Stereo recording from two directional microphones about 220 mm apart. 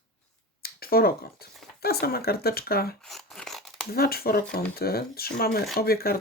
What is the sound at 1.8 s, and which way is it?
Speech, 45° left (ahead or behind).